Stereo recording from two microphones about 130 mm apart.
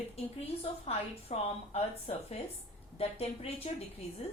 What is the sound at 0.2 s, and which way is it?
A woman's voice, 45° left (ahead or behind).